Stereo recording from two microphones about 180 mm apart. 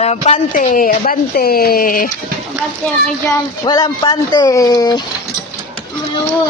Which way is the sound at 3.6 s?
25° left (ahead or behind).